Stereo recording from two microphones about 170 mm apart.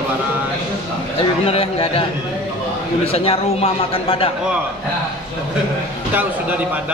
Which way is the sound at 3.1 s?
35° left (ahead or behind).